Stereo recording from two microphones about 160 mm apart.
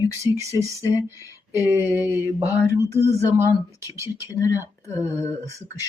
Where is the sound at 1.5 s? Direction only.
15° right (ahead or behind).